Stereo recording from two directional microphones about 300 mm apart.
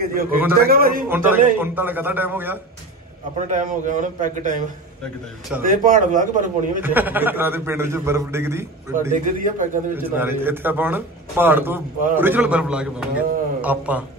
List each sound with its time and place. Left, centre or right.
0.7 s a man's voice: right
1.0 s a man's voice: centre
3.4 s a man's voice: right
6.8 s a man's voice: centre
9.1 s a man's voice: right
9.9 s a man's voice: centre